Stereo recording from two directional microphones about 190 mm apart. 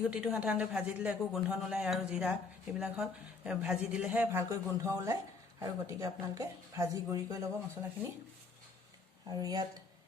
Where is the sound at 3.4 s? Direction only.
5° right (ahead or behind).